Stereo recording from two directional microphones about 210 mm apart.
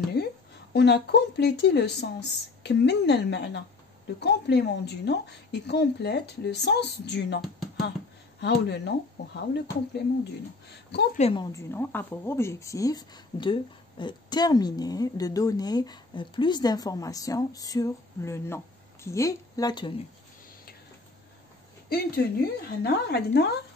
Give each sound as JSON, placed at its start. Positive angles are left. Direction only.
{"t": 0.2, "sound": "a sound", "side_deg": 50}
{"t": 0.7, "sound": "a woman's voice", "side_deg": 50}
{"t": 11.1, "sound": "a woman's voice", "side_deg": 30}
{"t": 11.5, "sound": "speech", "side_deg": 10}
{"t": 21.8, "sound": "a woman's voice", "side_deg": 45}